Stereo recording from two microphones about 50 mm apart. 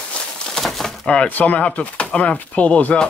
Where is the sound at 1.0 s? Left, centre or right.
Left.